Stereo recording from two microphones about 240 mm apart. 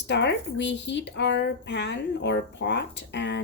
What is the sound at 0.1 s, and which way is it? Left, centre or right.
Speech, left.